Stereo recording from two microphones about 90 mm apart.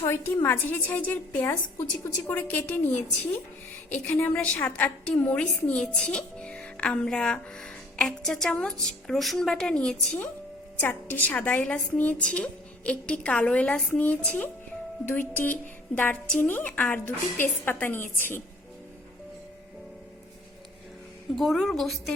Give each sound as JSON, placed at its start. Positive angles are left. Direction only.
{"t": 0.0, "sound": "a sound", "side_deg": 30}
{"t": 0.4, "sound": "a woman's voice", "side_deg": 20}
{"t": 3.9, "sound": "a woman's voice", "side_deg": 15}
{"t": 10.8, "sound": "a woman's voice", "side_deg": 20}
{"t": 21.3, "sound": "a woman's voice", "side_deg": 0}